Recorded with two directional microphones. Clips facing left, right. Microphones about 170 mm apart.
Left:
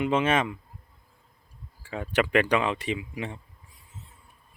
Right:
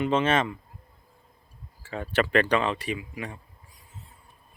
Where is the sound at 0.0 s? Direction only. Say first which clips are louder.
Even; 10° left (ahead or behind).